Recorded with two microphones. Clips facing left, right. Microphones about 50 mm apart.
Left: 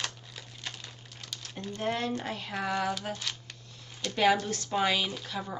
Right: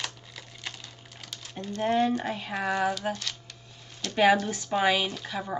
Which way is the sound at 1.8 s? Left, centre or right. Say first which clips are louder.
Right 7 dB; centre.